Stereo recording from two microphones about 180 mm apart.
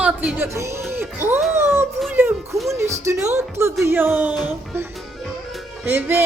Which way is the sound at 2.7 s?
15° right (ahead or behind).